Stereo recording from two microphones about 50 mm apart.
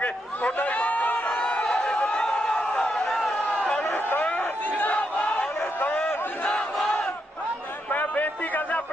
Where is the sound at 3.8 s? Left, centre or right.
Left.